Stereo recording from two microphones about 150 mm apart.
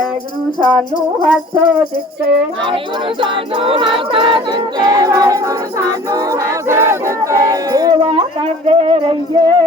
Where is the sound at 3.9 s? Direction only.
35° right (ahead or behind).